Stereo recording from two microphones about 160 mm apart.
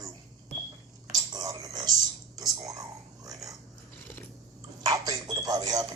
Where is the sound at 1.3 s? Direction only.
25° right (ahead or behind).